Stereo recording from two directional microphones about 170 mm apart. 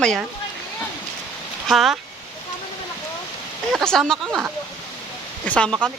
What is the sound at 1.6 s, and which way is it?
Speech, centre (ahead or behind).